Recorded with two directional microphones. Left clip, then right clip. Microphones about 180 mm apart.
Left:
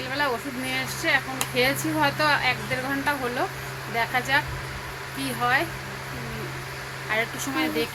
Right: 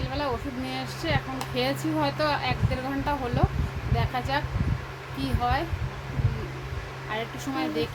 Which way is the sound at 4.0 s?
15° right (ahead or behind).